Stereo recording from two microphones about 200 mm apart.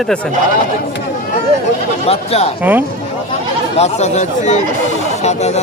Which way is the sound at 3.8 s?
35° left (ahead or behind).